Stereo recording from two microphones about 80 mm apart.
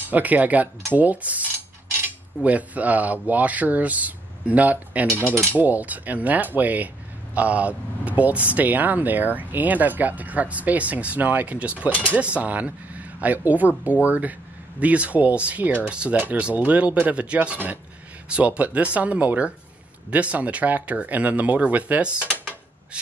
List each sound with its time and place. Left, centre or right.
0.1 s speech: centre